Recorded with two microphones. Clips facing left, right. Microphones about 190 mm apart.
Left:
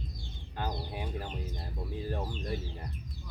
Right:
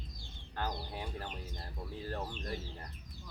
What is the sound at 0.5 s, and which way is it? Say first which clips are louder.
Speech: left 2 dB; 15° left (ahead or behind).